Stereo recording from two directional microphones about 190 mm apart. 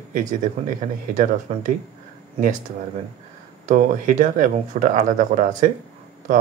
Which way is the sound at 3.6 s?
40° right (ahead or behind).